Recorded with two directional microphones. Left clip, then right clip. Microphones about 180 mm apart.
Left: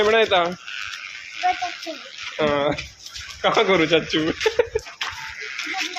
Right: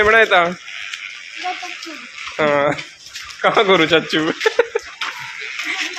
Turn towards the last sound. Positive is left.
turn(degrees=-15)  # may be behind; listen again after turning